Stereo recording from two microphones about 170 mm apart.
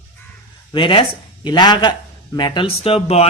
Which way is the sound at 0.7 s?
30° left (ahead or behind).